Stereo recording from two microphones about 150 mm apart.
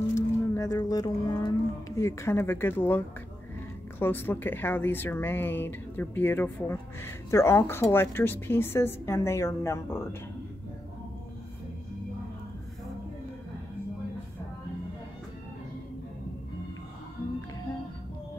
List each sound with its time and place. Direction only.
0.1 s speech: 20° left (ahead or behind)